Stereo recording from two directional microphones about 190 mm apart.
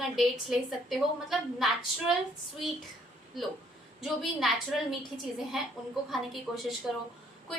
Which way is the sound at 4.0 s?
Centre (ahead or behind).